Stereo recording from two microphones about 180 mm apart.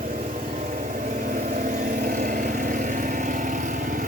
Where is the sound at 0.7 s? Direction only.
45° right (ahead or behind).